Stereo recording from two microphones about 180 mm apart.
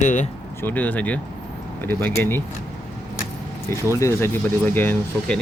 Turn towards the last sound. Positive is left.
turn(degrees=10)  # may be behind; listen again after turning